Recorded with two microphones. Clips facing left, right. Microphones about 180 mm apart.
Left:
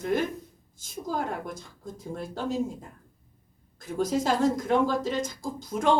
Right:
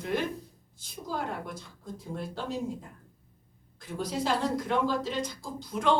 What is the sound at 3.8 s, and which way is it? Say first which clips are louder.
A woman's voice: left 6 dB; 45° left (ahead or behind).